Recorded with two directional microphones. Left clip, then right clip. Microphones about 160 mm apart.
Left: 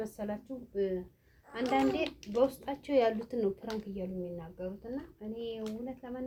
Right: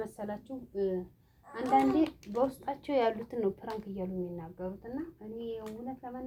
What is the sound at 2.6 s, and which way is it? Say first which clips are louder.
A woman's voice: left 1 dB; 35° right (ahead or behind).